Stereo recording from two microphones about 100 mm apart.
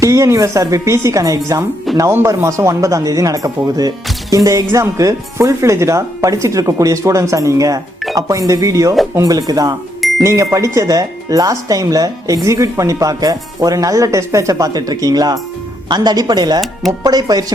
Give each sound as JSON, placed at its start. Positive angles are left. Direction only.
{"t": 0.0, "sound": "speech", "side_deg": -30}